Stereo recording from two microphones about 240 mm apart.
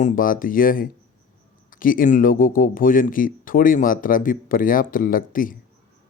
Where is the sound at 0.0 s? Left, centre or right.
Left.